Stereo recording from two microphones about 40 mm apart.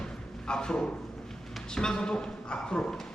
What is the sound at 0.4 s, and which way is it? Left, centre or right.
A man's voice, left.